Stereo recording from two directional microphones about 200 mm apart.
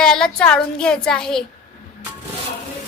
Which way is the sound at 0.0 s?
5° left (ahead or behind).